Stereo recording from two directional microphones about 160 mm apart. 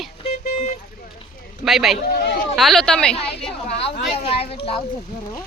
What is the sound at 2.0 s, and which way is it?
Speech, 70° left (ahead or behind).